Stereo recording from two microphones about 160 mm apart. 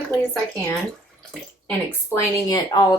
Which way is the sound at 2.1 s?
15° left (ahead or behind).